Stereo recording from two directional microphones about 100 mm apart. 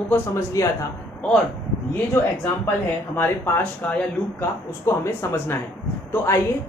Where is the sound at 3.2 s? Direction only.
25° left (ahead or behind).